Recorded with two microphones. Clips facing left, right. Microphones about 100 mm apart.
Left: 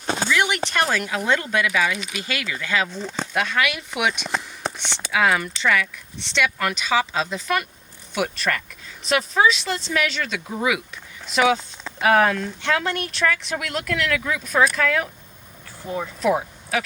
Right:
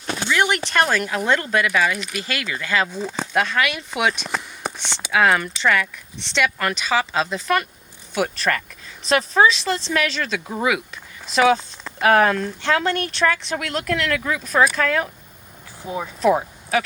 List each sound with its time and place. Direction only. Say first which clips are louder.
0.3 s a sound: right 3 dB; 45° right (ahead or behind)
0.7 s speech: right 3 dB; 50° right (ahead or behind)
2.9 s speech: right 2 dB; 10° right (ahead or behind)
3.3 s speech: right 2 dB; 35° right (ahead or behind)
4.3 s a sound: even; centre (ahead or behind)
5.1 s speech: right 2 dB; 50° right (ahead or behind)
15.8 s speech: even; 15° right (ahead or behind)
16.2 s speech: right 4 dB; 40° right (ahead or behind)